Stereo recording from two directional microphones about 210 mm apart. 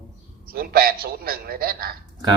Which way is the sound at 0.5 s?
45° right (ahead or behind).